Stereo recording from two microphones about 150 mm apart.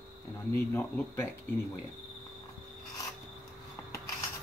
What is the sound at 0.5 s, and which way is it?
Speech, 15° left (ahead or behind).